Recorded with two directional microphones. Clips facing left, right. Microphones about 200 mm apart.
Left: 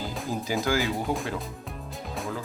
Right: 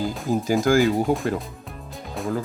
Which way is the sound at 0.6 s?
45° right (ahead or behind).